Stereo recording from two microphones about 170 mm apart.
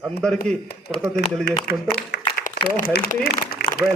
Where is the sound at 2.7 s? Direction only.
55° left (ahead or behind).